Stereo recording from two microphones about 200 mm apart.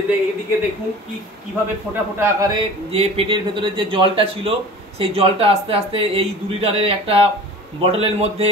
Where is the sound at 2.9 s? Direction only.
30° right (ahead or behind).